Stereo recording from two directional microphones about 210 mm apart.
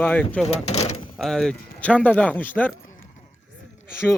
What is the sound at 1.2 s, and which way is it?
A man's voice, centre (ahead or behind).